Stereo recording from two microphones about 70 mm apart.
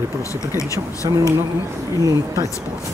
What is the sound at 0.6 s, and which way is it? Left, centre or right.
Speech, left.